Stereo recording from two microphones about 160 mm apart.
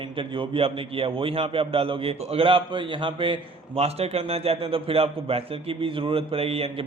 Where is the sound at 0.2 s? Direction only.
35° right (ahead or behind).